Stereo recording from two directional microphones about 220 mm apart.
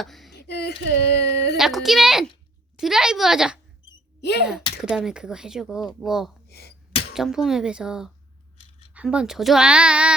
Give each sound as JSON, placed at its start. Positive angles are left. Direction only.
{"t": 0.0, "sound": "a sound", "side_deg": 0}
{"t": 0.3, "sound": "speech", "side_deg": 50}
{"t": 1.5, "sound": "speech", "side_deg": 0}
{"t": 4.2, "sound": "speech", "side_deg": 50}
{"t": 4.8, "sound": "speech", "side_deg": -5}
{"t": 6.5, "sound": "gasp", "side_deg": 45}
{"t": 7.1, "sound": "speech", "side_deg": 0}